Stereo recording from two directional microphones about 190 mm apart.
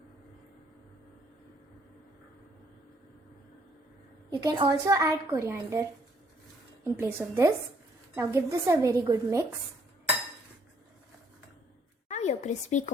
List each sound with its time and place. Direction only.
4.4 s speech: 20° right (ahead or behind)
6.9 s speech: 15° right (ahead or behind)
12.0 s a sound: 35° left (ahead or behind)